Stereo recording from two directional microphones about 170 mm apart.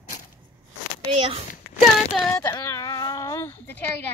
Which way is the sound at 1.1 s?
30° right (ahead or behind).